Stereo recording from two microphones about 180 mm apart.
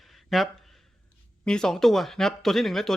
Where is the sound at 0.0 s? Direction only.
Centre (ahead or behind).